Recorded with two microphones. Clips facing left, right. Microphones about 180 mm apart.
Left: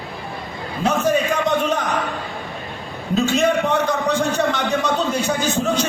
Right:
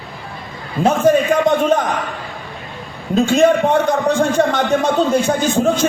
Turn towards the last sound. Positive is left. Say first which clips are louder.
# right 4 dB
turn(degrees=-50)  # may be behind; listen again after turning